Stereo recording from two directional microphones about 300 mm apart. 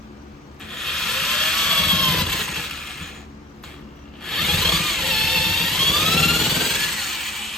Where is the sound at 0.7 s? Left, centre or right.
Centre.